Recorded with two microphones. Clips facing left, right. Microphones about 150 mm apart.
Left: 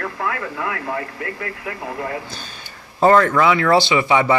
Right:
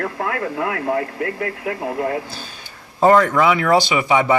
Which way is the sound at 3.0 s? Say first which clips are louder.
Even; 10° right (ahead or behind).